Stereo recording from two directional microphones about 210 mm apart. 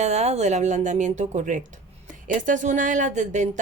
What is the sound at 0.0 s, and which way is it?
A woman's voice, 30° right (ahead or behind).